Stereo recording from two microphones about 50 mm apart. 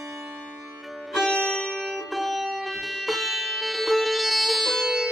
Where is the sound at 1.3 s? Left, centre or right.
Centre.